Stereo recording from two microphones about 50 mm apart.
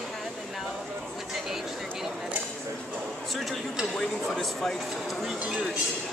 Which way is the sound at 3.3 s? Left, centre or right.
Centre.